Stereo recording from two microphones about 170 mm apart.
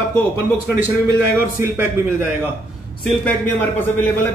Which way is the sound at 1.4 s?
15° right (ahead or behind).